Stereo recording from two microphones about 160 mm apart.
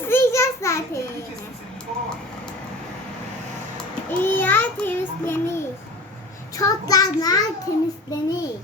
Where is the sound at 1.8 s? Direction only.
5° left (ahead or behind).